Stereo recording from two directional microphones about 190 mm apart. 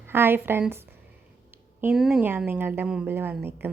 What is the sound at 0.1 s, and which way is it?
A woman's voice, 10° right (ahead or behind).